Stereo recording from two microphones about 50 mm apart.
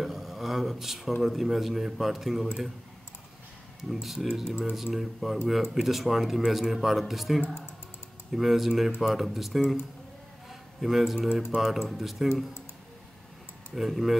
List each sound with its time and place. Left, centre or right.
0.0 s a sound: centre
1.2 s a man's voice: centre
3.9 s a man's voice: centre
4.5 s speech: right
4.9 s a man's voice: centre
6.4 s a man's voice: centre
10.5 s a sound: centre
11.6 s a man's voice: centre
13.7 s a man's voice: centre